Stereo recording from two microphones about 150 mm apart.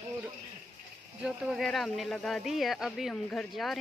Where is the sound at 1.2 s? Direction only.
Centre (ahead or behind).